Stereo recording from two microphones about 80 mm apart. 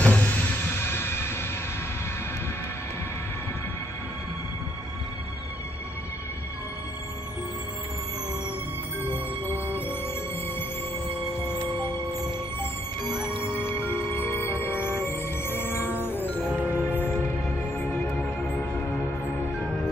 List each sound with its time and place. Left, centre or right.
0.0 s music: centre
9.0 s music: left
11.4 s music: left
13.4 s music: left
16.4 s music: centre
16.8 s music: left